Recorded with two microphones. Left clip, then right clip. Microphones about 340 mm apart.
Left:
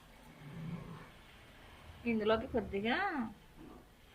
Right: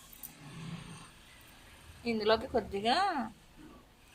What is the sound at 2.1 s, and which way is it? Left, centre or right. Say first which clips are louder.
A woman's voice: right 4 dB; centre.